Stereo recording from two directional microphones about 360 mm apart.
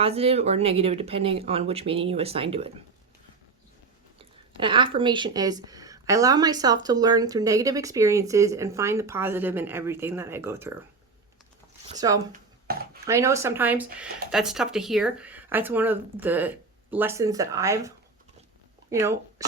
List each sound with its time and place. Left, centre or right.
0.0 s speech: centre
4.2 s speech: centre
11.9 s speech: centre
12.3 s a sound: right
13.1 s speech: centre